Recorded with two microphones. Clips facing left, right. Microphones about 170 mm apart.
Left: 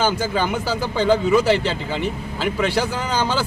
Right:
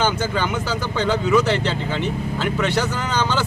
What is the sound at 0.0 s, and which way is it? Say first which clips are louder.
Speech: left 1 dB; 10° left (ahead or behind).